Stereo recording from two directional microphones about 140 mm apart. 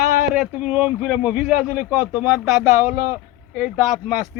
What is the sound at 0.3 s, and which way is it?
A man's voice, 5° right (ahead or behind).